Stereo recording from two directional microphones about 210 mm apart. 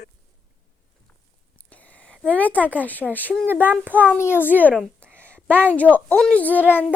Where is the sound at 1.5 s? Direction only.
5° left (ahead or behind).